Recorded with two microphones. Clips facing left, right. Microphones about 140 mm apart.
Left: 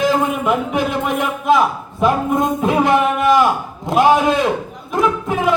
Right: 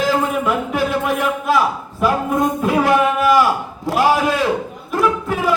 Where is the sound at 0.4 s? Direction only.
20° left (ahead or behind).